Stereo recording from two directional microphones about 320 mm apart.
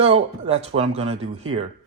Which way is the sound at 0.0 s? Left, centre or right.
Centre.